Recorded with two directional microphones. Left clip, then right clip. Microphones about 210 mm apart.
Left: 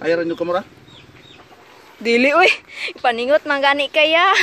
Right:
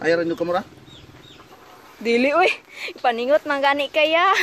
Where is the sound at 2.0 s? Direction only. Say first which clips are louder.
Left 4 dB; 10° left (ahead or behind).